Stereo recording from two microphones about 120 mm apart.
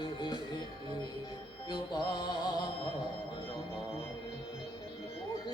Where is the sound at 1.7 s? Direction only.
35° left (ahead or behind).